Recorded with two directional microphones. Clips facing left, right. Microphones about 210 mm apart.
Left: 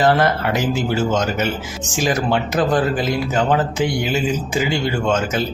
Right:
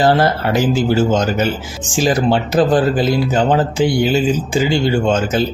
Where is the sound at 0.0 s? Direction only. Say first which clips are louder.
Right 2 dB; 30° right (ahead or behind).